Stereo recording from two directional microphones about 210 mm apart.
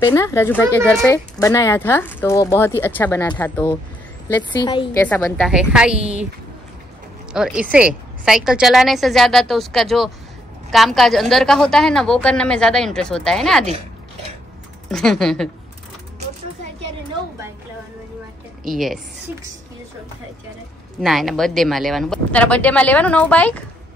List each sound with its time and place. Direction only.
0.0 s speech: 15° left (ahead or behind)
4.6 s a woman's voice: 20° left (ahead or behind)
5.0 s speech: 5° left (ahead or behind)
5.5 s a woman's voice: 5° right (ahead or behind)
7.3 s a woman's voice: 5° right (ahead or behind)
14.9 s a woman's voice: centre (ahead or behind)
18.6 s speech: centre (ahead or behind)
21.0 s speech: centre (ahead or behind)